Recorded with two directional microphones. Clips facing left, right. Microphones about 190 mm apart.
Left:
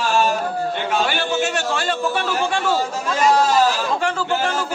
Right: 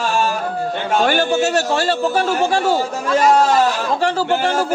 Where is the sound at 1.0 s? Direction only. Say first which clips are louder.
Right 8 dB; 45° right (ahead or behind).